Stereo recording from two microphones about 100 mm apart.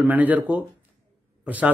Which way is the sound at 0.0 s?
15° right (ahead or behind).